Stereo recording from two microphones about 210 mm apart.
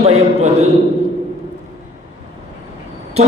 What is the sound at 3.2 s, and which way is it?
Vehicle, 30° right (ahead or behind).